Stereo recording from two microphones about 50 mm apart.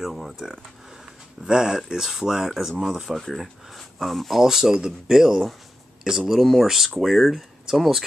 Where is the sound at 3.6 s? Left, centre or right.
Centre.